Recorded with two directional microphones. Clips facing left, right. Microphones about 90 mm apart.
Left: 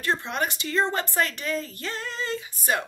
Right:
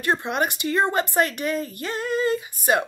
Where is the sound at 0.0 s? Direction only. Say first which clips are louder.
Right 4 dB; 15° right (ahead or behind).